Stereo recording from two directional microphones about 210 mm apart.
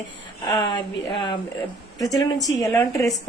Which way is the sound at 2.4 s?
15° left (ahead or behind).